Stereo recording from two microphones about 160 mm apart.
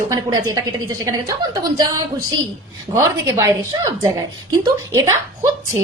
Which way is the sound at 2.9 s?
20° right (ahead or behind).